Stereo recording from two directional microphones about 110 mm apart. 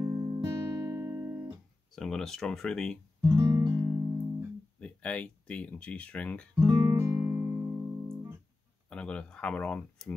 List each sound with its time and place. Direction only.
0.0 s music: 30° right (ahead or behind)
2.0 s speech: 5° left (ahead or behind)
3.2 s music: 40° right (ahead or behind)
3.7 s music: 25° right (ahead or behind)
4.7 s speech: 10° left (ahead or behind)
6.6 s music: 30° right (ahead or behind)
8.9 s speech: 10° left (ahead or behind)